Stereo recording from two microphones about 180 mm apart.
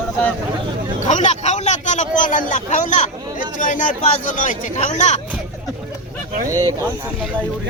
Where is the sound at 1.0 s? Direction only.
40° left (ahead or behind).